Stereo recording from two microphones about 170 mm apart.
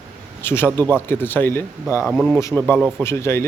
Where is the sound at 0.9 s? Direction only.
15° left (ahead or behind).